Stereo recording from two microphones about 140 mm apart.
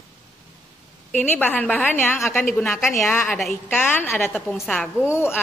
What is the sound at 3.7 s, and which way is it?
A woman's voice, 15° left (ahead or behind).